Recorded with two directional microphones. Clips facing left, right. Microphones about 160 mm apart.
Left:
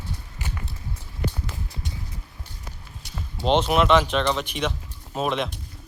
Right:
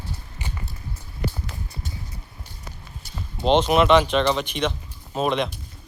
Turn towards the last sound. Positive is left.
turn(degrees=0)  # may be behind; listen again after turning